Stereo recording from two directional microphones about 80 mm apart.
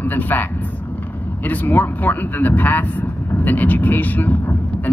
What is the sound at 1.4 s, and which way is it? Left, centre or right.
Speech, left.